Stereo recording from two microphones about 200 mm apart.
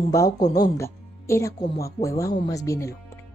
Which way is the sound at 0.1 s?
15° left (ahead or behind).